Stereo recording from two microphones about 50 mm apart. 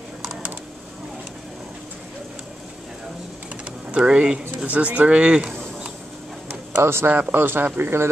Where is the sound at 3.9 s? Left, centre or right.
Right.